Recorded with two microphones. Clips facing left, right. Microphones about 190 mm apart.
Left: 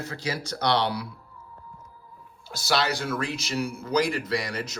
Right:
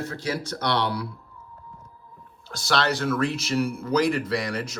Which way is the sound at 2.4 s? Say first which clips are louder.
Right 1 dB; 5° left (ahead or behind).